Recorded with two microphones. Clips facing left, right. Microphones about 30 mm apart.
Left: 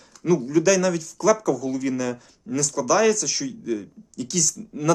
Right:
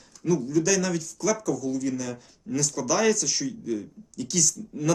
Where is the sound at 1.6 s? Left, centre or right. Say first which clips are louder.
Left 2 dB; left.